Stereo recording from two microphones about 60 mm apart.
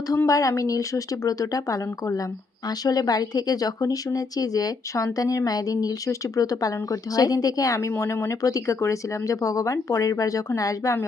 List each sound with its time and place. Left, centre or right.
0.3 s speech: left
2.6 s speech: left
6.1 s speech: left